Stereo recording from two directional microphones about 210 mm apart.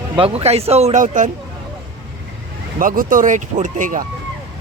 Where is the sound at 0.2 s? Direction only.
30° right (ahead or behind).